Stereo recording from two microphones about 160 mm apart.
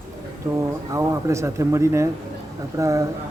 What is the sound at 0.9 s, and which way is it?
Speech, 20° right (ahead or behind).